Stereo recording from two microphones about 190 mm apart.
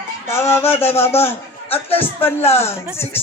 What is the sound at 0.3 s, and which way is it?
A man's voice, 15° left (ahead or behind).